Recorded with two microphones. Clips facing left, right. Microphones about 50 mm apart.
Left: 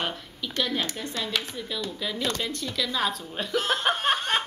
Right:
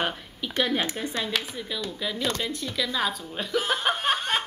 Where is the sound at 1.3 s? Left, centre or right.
Centre.